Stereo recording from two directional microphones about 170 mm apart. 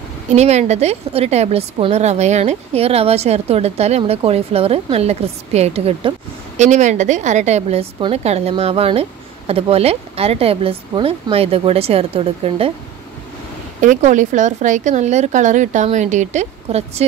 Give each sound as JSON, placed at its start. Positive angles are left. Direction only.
{"t": 0.3, "sound": "a woman's voice", "side_deg": -40}
{"t": 13.7, "sound": "a woman's voice", "side_deg": -50}